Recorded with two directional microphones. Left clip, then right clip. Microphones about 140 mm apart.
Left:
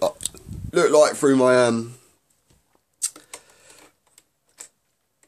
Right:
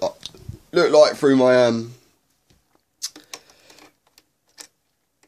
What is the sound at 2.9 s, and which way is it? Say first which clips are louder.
Rodents: even; 15° left (ahead or behind).